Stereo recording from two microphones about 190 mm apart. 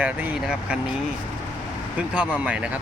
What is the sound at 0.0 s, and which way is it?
Speech, 5° right (ahead or behind).